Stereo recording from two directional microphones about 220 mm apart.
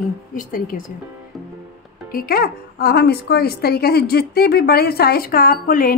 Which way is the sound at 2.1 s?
45° left (ahead or behind).